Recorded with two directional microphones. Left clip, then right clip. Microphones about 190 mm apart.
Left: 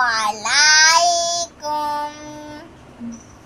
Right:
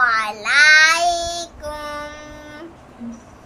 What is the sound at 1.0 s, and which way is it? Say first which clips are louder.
Child singing: left 2 dB; 40° right (ahead or behind).